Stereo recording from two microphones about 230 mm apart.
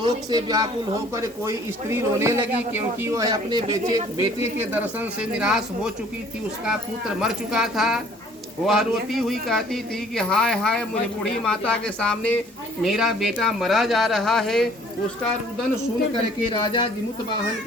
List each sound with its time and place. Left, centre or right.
0.0 s a man's voice: centre
7.2 s speech: centre
16.5 s speech: left